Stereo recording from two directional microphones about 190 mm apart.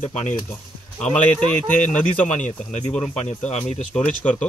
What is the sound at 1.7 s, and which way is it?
Speech, 40° left (ahead or behind).